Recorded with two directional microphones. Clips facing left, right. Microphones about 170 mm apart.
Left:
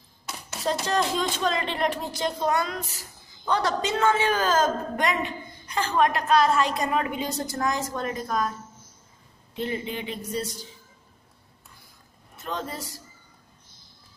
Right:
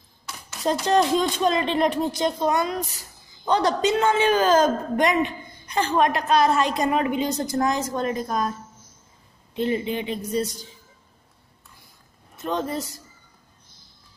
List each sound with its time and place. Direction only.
0.7 s a woman's voice: 20° right (ahead or behind)
9.6 s a woman's voice: 20° right (ahead or behind)
12.4 s a woman's voice: 20° right (ahead or behind)